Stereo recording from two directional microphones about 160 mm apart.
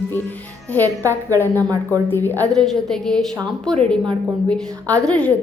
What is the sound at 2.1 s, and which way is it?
A woman's voice, 10° left (ahead or behind).